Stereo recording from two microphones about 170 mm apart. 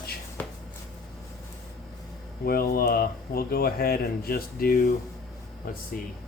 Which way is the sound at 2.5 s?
60° left (ahead or behind).